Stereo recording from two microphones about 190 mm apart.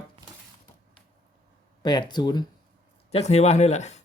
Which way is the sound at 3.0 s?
35° left (ahead or behind).